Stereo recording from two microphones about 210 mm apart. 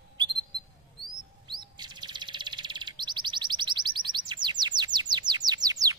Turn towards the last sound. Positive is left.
turn(degrees=-15)  # may be behind; listen again after turning